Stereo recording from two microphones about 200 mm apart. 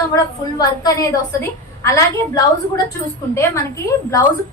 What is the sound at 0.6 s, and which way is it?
A woman's voice, 15° left (ahead or behind).